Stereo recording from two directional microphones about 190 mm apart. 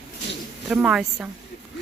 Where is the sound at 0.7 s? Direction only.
5° right (ahead or behind).